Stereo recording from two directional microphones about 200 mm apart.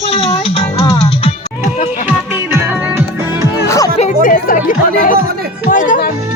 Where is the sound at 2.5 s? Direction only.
10° right (ahead or behind).